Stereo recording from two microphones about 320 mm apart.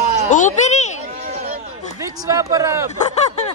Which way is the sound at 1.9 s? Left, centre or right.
Centre.